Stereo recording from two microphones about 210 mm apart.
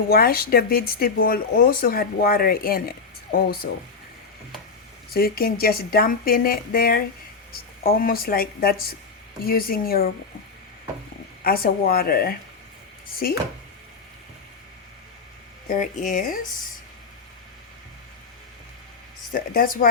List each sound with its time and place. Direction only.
0.1 s speech: 45° left (ahead or behind)
5.1 s speech: 45° left (ahead or behind)
11.4 s speech: 45° left (ahead or behind)
15.7 s speech: 35° left (ahead or behind)
19.3 s speech: 40° left (ahead or behind)